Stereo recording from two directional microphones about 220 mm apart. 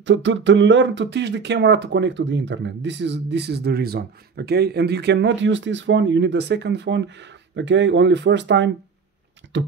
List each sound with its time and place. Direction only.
0.0 s speech: 55° right (ahead or behind)
9.5 s beatboxing: 55° right (ahead or behind)